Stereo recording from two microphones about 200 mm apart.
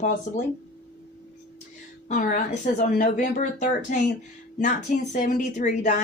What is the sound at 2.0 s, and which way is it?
Speech, 40° left (ahead or behind).